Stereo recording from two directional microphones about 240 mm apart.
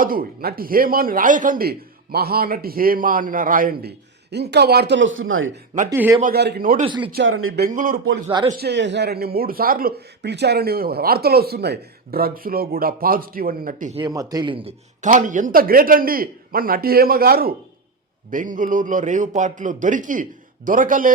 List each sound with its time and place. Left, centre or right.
0.0 s speech: right
5.9 s a man's voice: centre
6.3 s speech: right
6.8 s speech: right
7.1 s speech: right
8.3 s speech: centre
8.5 s speech: right
14.0 s speech: centre; by 21.1 s right